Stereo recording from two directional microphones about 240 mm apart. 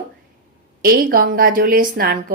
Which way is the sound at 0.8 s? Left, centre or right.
Right.